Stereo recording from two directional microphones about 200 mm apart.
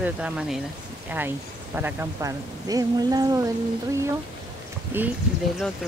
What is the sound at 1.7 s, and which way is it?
Speech, 10° right (ahead or behind).